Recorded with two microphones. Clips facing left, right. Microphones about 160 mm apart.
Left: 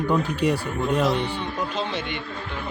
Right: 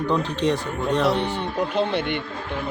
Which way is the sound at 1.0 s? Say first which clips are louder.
Right 2 dB; 60° right (ahead or behind).